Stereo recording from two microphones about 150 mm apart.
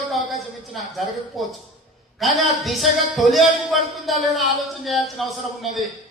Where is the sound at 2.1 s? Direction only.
Centre (ahead or behind).